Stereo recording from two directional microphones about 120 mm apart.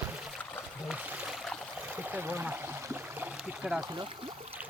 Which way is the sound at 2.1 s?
15° right (ahead or behind).